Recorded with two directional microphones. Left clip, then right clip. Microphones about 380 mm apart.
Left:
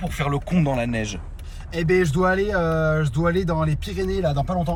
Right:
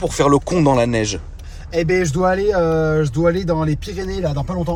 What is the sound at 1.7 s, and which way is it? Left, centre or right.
Speech, centre.